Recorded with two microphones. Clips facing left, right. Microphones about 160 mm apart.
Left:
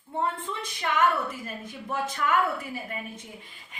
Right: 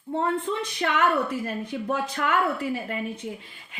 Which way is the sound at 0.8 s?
65° right (ahead or behind).